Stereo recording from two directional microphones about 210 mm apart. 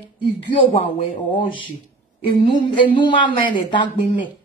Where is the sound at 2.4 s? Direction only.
25° left (ahead or behind).